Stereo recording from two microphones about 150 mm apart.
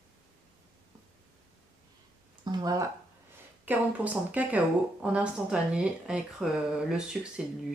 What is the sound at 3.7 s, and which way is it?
Speech, 15° right (ahead or behind).